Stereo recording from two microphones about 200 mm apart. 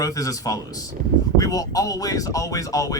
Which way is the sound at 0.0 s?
15° left (ahead or behind).